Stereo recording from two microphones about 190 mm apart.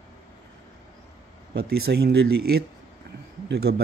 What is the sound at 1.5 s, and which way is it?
Speech, 60° right (ahead or behind).